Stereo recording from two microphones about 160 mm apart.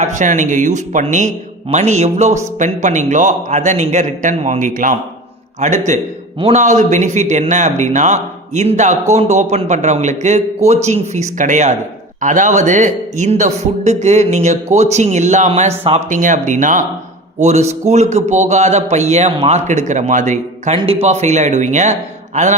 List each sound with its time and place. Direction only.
0.0 s a man's voice: 50° right (ahead or behind)